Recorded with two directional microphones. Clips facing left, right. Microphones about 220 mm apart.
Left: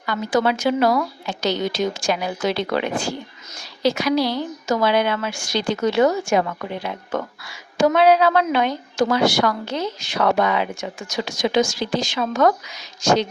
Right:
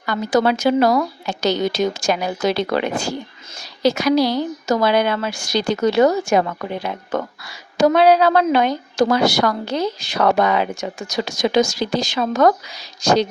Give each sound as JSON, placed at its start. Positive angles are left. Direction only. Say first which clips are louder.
{"t": 0.0, "sound": "a woman's voice", "louder": "right 3 dB", "side_deg": -40}